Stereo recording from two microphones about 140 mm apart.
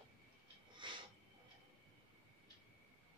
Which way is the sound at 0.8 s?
35° right (ahead or behind).